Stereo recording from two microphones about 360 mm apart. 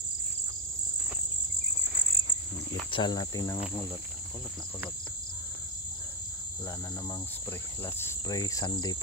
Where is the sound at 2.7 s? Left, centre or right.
Centre.